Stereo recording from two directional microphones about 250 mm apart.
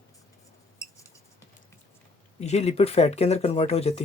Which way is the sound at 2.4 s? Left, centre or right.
Left.